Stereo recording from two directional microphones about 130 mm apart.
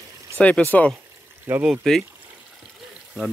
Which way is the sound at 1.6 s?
Centre (ahead or behind).